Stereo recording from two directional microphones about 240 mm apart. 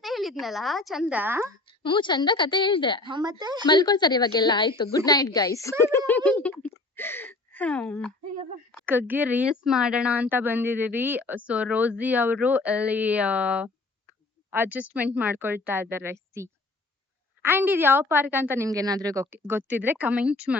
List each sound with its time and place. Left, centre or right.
0.0 s a woman's voice: centre
1.6 s a woman's voice: centre
3.0 s speech: centre
3.7 s a woman's voice: centre
6.9 s gasp: centre
8.9 s speech: centre